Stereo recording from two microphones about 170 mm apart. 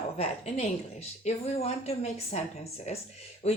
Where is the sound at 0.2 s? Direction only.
40° left (ahead or behind).